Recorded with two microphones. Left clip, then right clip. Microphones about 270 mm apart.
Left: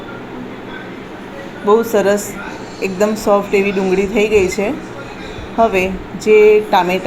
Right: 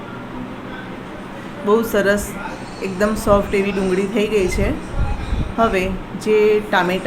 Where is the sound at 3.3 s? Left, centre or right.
Centre.